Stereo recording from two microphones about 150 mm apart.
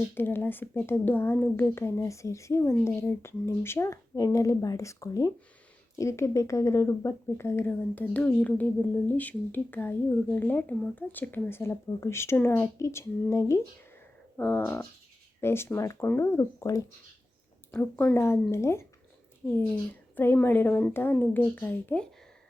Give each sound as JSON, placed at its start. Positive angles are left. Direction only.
{"t": 0.1, "sound": "speech", "side_deg": 15}
{"t": 17.7, "sound": "speech", "side_deg": 10}